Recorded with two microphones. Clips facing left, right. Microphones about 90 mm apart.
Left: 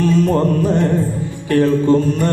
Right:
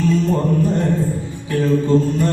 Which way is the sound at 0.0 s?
65° left (ahead or behind).